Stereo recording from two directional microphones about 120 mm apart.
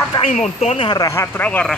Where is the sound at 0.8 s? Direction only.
30° left (ahead or behind).